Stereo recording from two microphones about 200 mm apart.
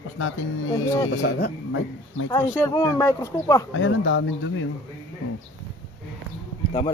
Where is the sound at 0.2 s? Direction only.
85° left.